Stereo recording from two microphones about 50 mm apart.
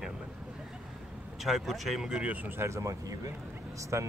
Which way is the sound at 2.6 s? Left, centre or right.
Right.